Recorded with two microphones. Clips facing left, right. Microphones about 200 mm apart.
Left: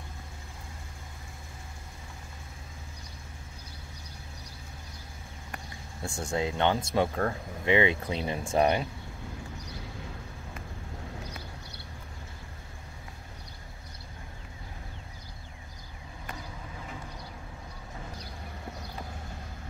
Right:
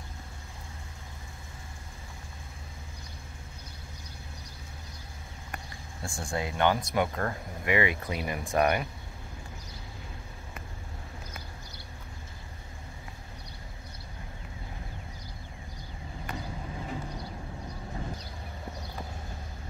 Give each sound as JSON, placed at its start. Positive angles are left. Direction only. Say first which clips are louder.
{"t": 6.0, "sound": "speech", "louder": "left 3 dB", "side_deg": 20}